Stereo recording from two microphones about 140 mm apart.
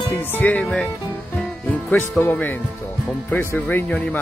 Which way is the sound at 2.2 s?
15° left (ahead or behind).